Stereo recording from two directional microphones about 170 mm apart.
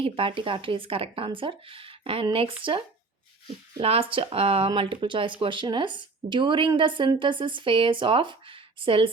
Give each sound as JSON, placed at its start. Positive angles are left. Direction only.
{"t": 0.0, "sound": "speech", "side_deg": -30}